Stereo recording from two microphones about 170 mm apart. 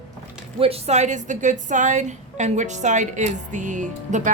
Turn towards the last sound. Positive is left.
turn(degrees=-45)  # may be behind; listen again after turning